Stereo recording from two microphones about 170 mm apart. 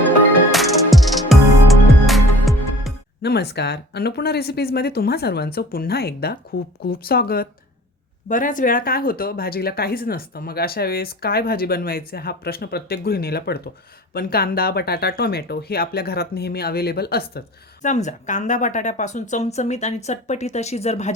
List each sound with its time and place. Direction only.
0.5 s music: centre (ahead or behind)
3.2 s speech: 75° left (ahead or behind)
8.3 s speech: 50° left (ahead or behind)
17.8 s a woman's voice: 45° left (ahead or behind)